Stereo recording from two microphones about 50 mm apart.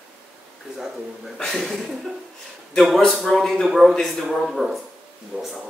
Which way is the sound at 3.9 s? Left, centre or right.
Centre.